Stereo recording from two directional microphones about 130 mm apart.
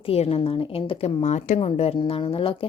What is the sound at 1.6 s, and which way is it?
Speech, 50° left (ahead or behind).